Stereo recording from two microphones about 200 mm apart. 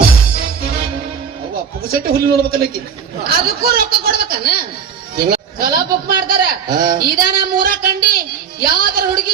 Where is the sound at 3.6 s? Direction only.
50° right (ahead or behind).